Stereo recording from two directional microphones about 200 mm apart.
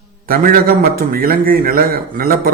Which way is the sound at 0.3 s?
45° right (ahead or behind).